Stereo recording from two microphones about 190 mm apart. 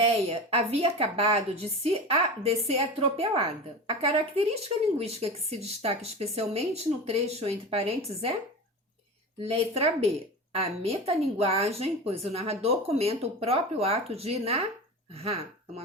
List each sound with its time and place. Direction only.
0.0 s a woman's voice: 30° right (ahead or behind)
9.4 s a woman's voice: 30° right (ahead or behind)